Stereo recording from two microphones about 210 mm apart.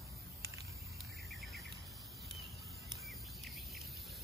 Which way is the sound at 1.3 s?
Centre (ahead or behind).